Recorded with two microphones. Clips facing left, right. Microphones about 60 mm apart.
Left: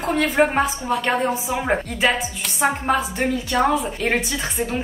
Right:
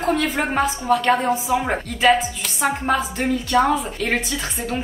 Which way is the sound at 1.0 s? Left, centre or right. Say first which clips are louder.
Right 2 dB; centre.